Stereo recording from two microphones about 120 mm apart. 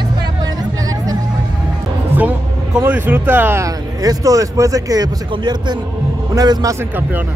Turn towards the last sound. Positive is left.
turn(degrees=-30)  # may be behind; listen again after turning